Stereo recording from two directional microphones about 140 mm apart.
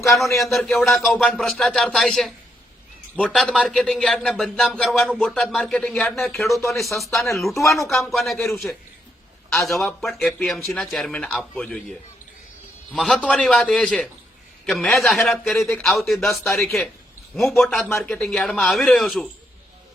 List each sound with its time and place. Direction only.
0.2 s speech: centre (ahead or behind)
7.9 s speech: 15° left (ahead or behind)
8.1 s speech: centre (ahead or behind)
17.8 s speech: 15° left (ahead or behind)